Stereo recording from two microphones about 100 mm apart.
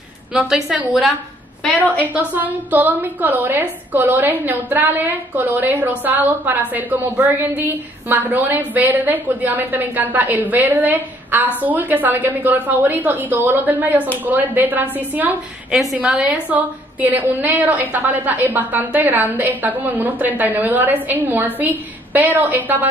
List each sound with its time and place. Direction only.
0.3 s a woman's voice: 5° right (ahead or behind)
15.7 s a woman's voice: centre (ahead or behind)
16.0 s a woman's voice: 10° right (ahead or behind)